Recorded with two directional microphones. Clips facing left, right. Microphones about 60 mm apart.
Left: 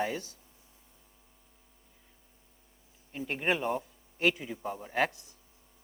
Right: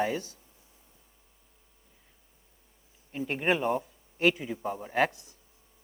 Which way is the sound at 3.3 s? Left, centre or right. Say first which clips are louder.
Right 3 dB; right.